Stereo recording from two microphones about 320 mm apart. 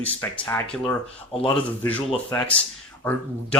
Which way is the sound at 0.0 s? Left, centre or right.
Centre.